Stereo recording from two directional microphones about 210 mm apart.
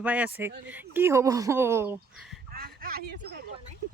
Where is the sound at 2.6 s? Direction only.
45° right (ahead or behind).